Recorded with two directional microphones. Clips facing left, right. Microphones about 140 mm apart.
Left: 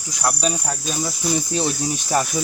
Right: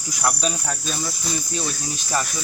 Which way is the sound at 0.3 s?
5° left (ahead or behind).